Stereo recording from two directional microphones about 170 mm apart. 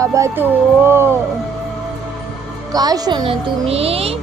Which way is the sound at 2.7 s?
25° right (ahead or behind).